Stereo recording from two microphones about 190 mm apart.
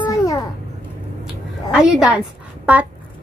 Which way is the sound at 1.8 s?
5° right (ahead or behind).